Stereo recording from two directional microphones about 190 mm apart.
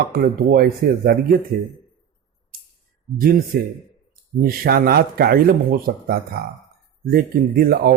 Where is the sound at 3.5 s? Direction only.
55° right (ahead or behind).